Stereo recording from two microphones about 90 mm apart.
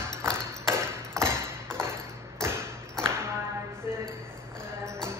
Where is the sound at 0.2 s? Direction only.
30° right (ahead or behind).